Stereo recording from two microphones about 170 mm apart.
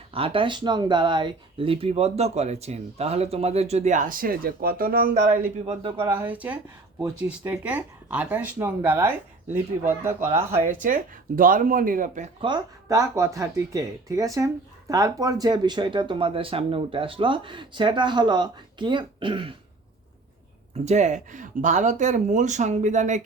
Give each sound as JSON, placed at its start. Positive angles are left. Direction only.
{"t": 0.1, "sound": "speech", "side_deg": -35}
{"t": 5.6, "sound": "speech", "side_deg": -35}
{"t": 6.1, "sound": "speech", "side_deg": -10}
{"t": 10.6, "sound": "speech", "side_deg": -50}
{"t": 12.4, "sound": "speech", "side_deg": -25}
{"t": 20.8, "sound": "speech", "side_deg": -45}